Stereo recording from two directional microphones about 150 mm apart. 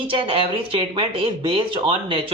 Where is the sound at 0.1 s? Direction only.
35° right (ahead or behind).